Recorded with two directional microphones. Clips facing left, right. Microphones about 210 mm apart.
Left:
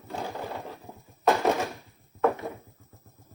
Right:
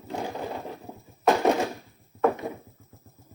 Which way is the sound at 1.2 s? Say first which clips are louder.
Right 2 dB; 15° right (ahead or behind).